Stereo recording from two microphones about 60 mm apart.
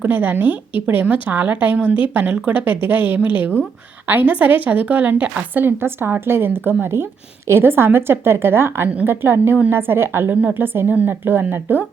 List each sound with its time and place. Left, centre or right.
0.0 s a woman's voice: right